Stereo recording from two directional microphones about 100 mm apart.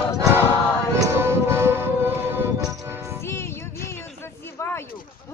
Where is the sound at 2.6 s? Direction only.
35° right (ahead or behind).